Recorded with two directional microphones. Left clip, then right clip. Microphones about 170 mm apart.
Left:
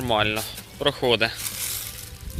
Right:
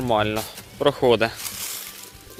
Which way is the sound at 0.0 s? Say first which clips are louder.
Right 1 dB; 15° right (ahead or behind).